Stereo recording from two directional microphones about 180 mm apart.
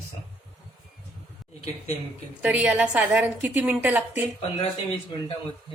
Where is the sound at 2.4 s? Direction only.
5° right (ahead or behind).